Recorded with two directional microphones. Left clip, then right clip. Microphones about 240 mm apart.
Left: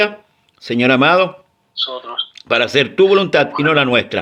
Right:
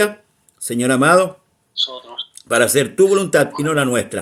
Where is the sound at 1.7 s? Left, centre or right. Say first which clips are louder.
Left 2 dB; centre.